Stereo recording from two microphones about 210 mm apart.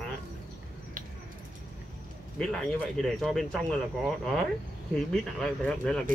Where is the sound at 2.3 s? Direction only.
5° left (ahead or behind).